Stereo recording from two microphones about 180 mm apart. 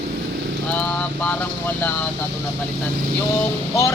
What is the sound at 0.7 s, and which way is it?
Speech, 10° left (ahead or behind).